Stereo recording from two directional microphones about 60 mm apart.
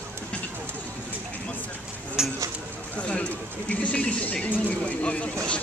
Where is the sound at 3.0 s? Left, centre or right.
Left.